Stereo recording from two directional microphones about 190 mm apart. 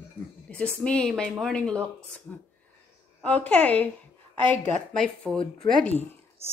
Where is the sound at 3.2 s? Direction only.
5° left (ahead or behind).